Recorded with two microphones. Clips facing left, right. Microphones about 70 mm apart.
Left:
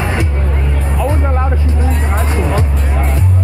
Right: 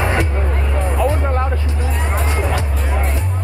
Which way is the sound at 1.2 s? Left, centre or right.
Centre.